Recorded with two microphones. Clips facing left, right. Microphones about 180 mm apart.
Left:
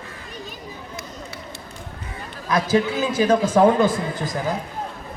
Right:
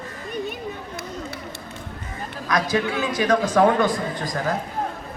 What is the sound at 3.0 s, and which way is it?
Speech, 30° left (ahead or behind).